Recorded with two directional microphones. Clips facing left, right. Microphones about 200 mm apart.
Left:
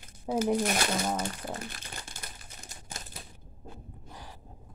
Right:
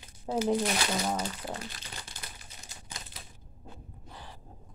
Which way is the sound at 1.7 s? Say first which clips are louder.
Left 1 dB; 50° left (ahead or behind).